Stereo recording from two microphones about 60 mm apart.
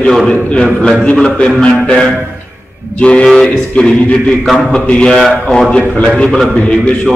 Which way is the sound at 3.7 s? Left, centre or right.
Centre.